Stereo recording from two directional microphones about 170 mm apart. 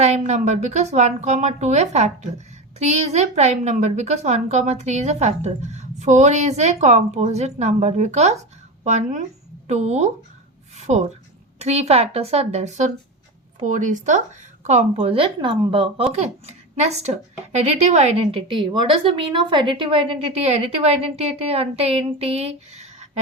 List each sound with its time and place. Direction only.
0.0 s a woman's voice: 40° right (ahead or behind)
10.8 s a sound: 40° right (ahead or behind)
11.6 s speech: 40° right (ahead or behind)